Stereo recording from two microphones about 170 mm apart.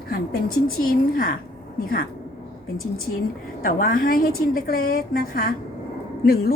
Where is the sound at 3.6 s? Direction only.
55° left (ahead or behind).